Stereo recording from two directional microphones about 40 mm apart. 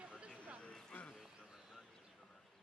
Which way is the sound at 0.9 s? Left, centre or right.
Left.